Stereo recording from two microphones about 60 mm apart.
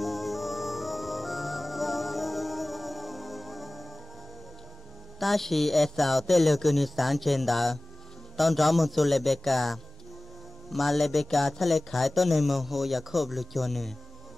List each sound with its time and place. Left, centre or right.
0.0 s music: centre
5.2 s speech: centre